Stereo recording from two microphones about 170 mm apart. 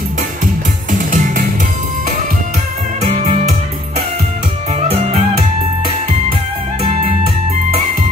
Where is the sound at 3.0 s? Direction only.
40° right (ahead or behind).